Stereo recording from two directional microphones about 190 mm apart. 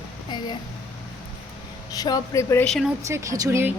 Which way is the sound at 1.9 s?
20° left (ahead or behind).